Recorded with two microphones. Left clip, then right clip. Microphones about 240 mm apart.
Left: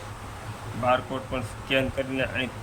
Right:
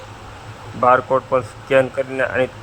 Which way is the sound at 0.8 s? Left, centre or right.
Right.